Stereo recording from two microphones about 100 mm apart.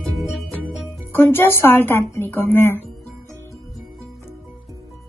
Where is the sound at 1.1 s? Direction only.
25° left (ahead or behind).